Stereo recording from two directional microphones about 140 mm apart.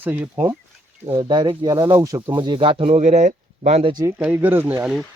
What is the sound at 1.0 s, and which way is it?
Speech, 35° right (ahead or behind).